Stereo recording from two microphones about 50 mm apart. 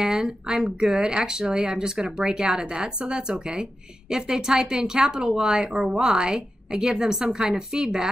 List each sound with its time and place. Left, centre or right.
0.0 s speech: centre